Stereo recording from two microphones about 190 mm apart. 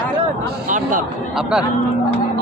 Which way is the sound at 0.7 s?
45° right (ahead or behind).